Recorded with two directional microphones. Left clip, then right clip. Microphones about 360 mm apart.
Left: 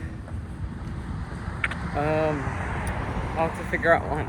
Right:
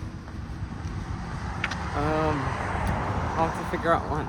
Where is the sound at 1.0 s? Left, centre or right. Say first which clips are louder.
Right 3 dB; centre.